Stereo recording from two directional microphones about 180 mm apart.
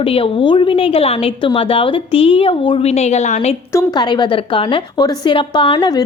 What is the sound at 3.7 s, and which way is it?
A woman's voice, 20° left (ahead or behind).